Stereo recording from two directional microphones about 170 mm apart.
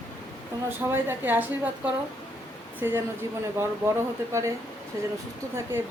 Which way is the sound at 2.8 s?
15° right (ahead or behind).